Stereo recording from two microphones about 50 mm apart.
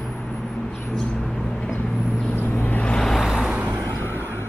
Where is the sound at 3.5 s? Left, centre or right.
Right.